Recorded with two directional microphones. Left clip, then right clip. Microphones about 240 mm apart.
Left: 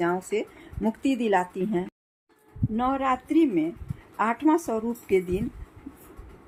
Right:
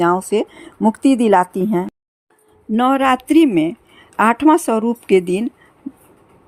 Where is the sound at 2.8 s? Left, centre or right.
Right.